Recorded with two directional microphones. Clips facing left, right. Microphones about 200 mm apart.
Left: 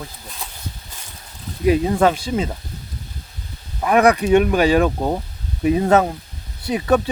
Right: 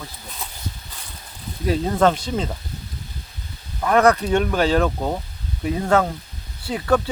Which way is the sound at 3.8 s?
15° left (ahead or behind).